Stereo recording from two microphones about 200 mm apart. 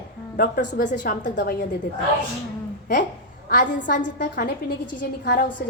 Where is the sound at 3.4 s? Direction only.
40° left (ahead or behind).